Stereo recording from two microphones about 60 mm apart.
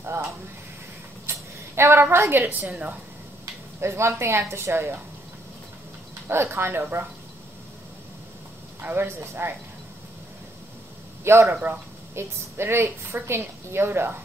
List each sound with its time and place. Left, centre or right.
0.0 s a sound: right
1.8 s a woman's voice: right
3.8 s a woman's voice: right
6.2 s a woman's voice: right
8.8 s a woman's voice: right
11.2 s a woman's voice: right